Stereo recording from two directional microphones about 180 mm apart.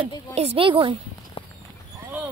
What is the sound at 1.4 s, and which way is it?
Clip-clop, 30° left (ahead or behind).